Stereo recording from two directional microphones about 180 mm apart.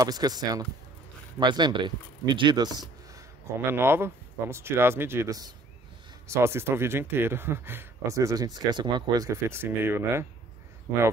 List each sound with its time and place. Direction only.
0.0 s speech: 20° right (ahead or behind)